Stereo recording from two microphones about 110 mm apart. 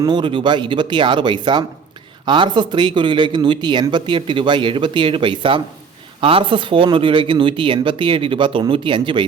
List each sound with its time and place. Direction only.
0.0 s speech: 45° right (ahead or behind)